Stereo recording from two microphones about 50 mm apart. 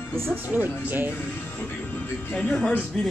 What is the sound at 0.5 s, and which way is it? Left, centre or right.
Speech, right.